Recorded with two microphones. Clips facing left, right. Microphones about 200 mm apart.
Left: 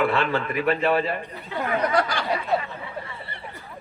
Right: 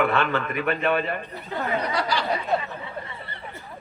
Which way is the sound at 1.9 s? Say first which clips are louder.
Left 2 dB; 50° left (ahead or behind).